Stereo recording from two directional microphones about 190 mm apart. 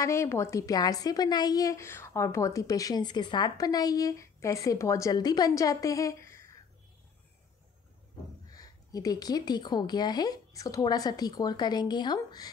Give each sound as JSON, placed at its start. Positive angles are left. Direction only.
{"t": 0.0, "sound": "a woman's voice", "side_deg": 15}
{"t": 8.5, "sound": "a woman's voice", "side_deg": 20}